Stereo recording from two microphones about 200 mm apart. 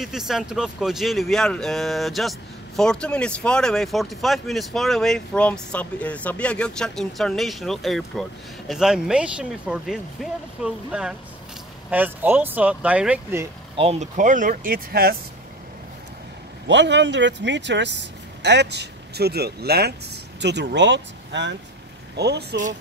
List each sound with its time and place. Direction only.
0.0 s speech: centre (ahead or behind)
13.7 s speech: 35° right (ahead or behind); by 15.1 s 50° right (ahead or behind)
16.6 s speech: 60° right (ahead or behind)